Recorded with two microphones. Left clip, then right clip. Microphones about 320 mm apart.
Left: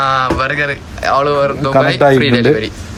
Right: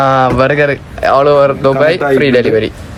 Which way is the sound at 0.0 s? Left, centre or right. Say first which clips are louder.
Right 4 dB; centre.